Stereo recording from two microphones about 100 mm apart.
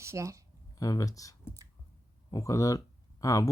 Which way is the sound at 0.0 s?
30° right (ahead or behind).